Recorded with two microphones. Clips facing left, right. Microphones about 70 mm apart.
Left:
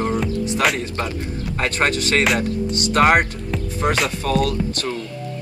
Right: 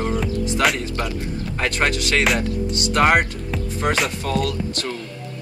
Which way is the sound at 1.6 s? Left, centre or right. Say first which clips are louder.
Left 1 dB; left.